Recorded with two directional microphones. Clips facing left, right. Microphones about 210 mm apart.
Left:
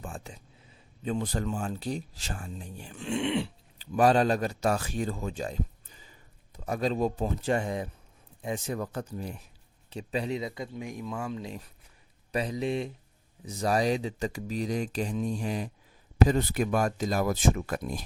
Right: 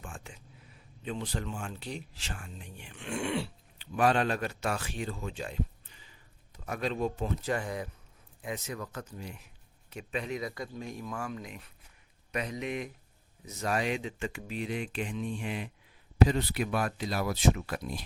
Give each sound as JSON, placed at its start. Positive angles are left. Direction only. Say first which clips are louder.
{"t": 0.0, "sound": "speech", "louder": "left 5 dB", "side_deg": 35}
{"t": 3.1, "sound": "speech", "louder": "left 4 dB", "side_deg": 20}
{"t": 3.8, "sound": "a man's voice", "louder": "left 4 dB", "side_deg": 40}